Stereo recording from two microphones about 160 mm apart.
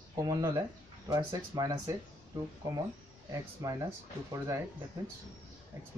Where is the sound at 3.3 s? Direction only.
20° right (ahead or behind).